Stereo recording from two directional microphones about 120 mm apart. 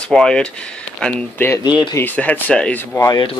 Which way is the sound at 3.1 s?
40° left (ahead or behind).